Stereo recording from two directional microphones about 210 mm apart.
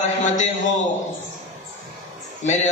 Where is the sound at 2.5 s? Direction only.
35° left (ahead or behind).